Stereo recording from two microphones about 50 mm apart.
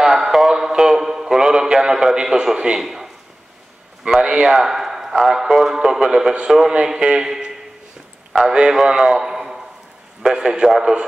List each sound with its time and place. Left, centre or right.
0.0 s a sound: centre
4.2 s a man's voice: centre
8.5 s a man's voice: centre